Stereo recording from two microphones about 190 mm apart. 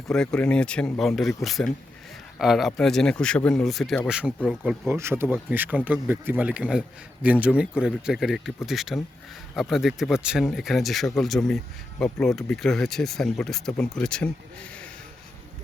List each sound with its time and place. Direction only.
0.1 s a man's voice: 5° left (ahead or behind)